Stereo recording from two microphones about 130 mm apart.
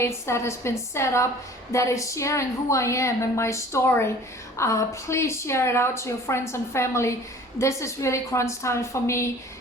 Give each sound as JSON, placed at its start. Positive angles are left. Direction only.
{"t": 0.0, "sound": "a woman's voice", "side_deg": 20}